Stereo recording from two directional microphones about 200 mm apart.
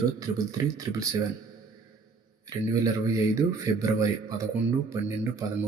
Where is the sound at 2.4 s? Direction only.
15° right (ahead or behind).